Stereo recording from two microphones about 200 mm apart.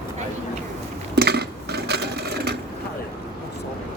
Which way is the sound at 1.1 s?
55° right (ahead or behind).